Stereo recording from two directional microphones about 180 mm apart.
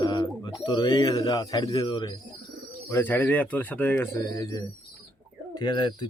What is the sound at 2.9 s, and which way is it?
Speech, 15° left (ahead or behind).